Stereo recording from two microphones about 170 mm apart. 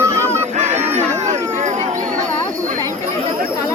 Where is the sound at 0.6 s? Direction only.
40° right (ahead or behind).